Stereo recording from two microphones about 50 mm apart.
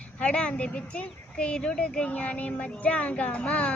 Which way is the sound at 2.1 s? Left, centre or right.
Left.